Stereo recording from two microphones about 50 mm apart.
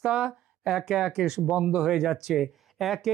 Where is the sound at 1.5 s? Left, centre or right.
Right.